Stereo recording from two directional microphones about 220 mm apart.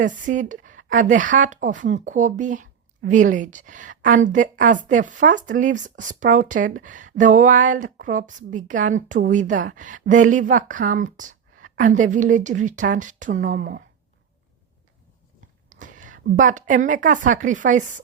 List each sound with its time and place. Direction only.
0.0 s speech: 35° right (ahead or behind)
15.7 s a woman's voice: 35° right (ahead or behind)